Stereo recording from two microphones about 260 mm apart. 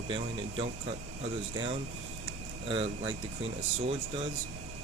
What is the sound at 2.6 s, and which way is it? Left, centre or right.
Speech, centre.